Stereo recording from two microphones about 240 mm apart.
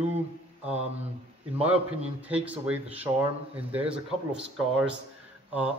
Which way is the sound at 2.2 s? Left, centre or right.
Centre.